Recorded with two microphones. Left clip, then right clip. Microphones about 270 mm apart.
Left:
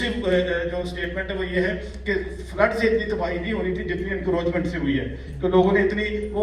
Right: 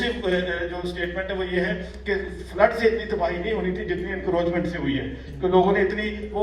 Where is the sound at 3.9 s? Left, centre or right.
Right.